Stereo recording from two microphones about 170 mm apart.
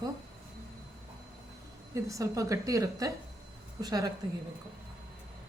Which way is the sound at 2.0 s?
20° right (ahead or behind).